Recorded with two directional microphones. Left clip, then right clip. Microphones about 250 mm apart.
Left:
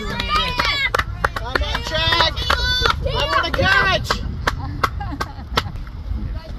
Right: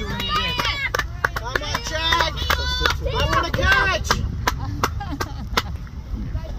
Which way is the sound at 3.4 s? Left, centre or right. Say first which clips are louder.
Left 2 dB; centre.